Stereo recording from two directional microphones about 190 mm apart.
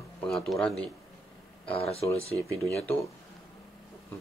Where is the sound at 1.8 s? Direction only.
30° left (ahead or behind).